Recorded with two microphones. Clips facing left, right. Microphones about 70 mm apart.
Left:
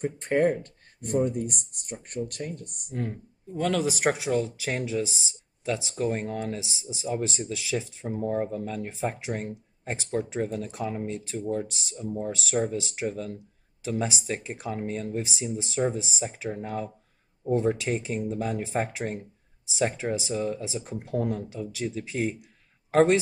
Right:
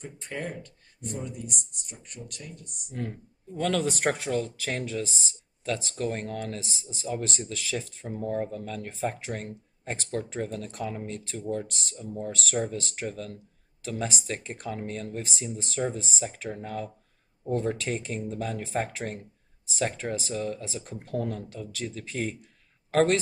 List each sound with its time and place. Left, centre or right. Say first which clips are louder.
0.0 s speech: left 12 dB; left
2.9 s speech: left 2 dB; centre